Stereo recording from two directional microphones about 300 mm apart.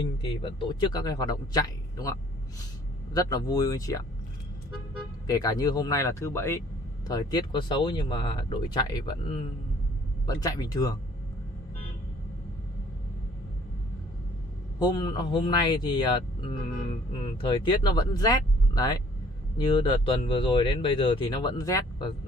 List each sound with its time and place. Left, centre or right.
0.2 s speech: centre
5.2 s speech: centre
14.8 s speech: centre